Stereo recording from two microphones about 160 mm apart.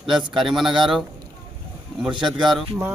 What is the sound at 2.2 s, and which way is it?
Speech, centre (ahead or behind).